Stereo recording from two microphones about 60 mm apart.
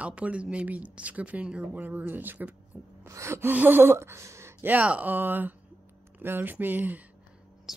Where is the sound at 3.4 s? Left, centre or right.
Right.